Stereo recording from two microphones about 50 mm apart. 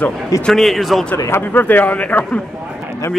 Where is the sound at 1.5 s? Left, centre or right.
Left.